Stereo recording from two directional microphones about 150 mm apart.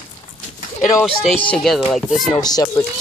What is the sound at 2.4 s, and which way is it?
Speech, 25° left (ahead or behind).